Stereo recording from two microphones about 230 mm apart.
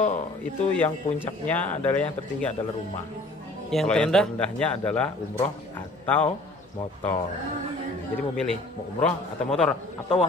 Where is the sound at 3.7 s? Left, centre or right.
Centre.